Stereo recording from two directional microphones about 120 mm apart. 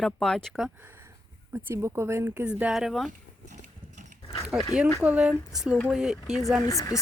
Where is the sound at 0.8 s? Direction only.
15° right (ahead or behind).